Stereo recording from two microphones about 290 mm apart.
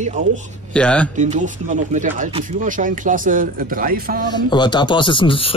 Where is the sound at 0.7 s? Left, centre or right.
Centre.